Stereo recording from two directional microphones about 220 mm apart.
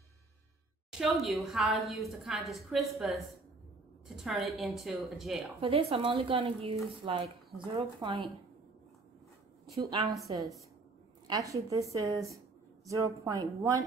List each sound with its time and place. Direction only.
0.9 s a woman's voice: centre (ahead or behind)
4.2 s a woman's voice: centre (ahead or behind)
5.6 s speech: 25° right (ahead or behind)
9.8 s speech: 20° right (ahead or behind)
11.2 s a woman's voice: 15° right (ahead or behind)